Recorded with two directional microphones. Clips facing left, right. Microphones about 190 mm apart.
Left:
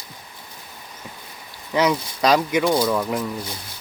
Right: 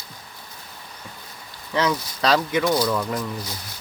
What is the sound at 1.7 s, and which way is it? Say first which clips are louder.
Speech: left 3 dB; 15° left (ahead or behind).